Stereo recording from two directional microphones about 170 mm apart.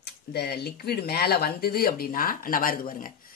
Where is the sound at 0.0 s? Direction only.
75° left (ahead or behind).